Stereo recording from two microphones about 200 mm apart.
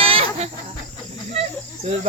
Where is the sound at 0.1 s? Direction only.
30° right (ahead or behind).